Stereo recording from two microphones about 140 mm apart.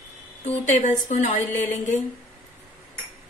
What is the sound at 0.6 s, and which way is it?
Speech, 60° left (ahead or behind).